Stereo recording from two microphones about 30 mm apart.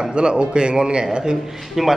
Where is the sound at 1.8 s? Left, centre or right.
Centre.